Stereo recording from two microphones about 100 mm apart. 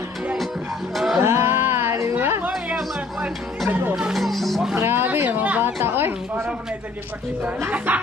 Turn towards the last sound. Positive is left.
turn(degrees=-15)  # may be behind; listen again after turning